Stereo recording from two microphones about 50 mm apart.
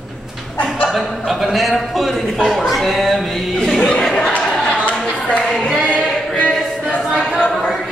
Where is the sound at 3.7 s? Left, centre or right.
Centre.